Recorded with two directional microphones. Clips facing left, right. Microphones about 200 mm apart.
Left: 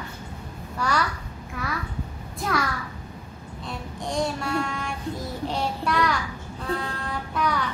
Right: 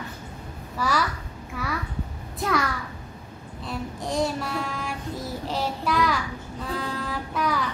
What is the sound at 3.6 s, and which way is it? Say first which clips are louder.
Child singing: right 2 dB; 5° right (ahead or behind).